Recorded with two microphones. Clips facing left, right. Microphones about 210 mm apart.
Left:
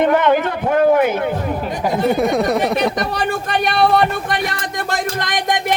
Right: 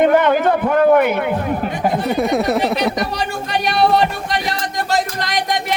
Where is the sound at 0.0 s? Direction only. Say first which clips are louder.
Right 1 dB; 45° right (ahead or behind).